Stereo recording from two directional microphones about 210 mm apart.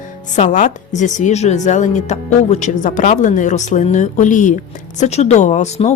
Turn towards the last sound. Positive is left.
turn(degrees=35)  # may be behind; listen again after turning